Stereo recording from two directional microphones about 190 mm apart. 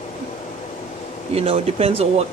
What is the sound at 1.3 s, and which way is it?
Speech, 30° right (ahead or behind).